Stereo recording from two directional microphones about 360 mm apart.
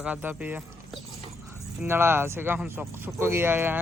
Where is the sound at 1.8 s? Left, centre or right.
Centre.